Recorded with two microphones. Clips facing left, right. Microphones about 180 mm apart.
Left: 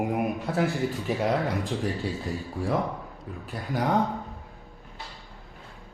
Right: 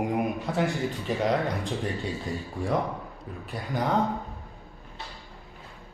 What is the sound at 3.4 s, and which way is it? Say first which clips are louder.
Speech: left 1 dB; centre (ahead or behind).